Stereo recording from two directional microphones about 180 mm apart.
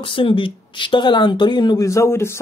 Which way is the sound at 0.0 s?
30° left (ahead or behind).